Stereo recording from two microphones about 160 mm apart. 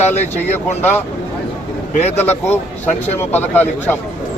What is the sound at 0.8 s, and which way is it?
Speech, 10° left (ahead or behind).